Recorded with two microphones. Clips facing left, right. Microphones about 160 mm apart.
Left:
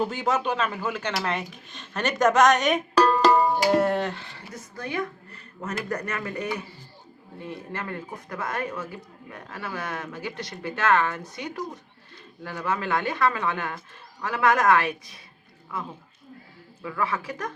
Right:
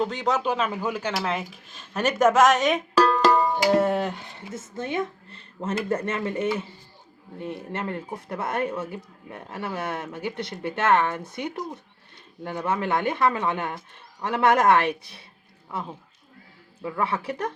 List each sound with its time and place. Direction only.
0.0 s speech: 5° left (ahead or behind); by 11.2 s 20° right (ahead or behind)
12.4 s speech: 25° right (ahead or behind)
16.8 s speech: 30° right (ahead or behind)